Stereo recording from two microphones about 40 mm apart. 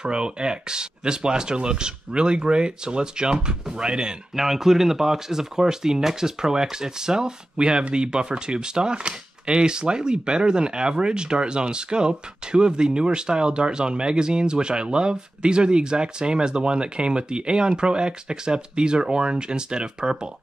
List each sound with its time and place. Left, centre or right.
0.0 s speech: right
4.4 s speech: centre